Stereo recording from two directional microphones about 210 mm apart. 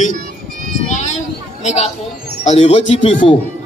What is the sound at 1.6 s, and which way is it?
A woman's voice, 30° left (ahead or behind).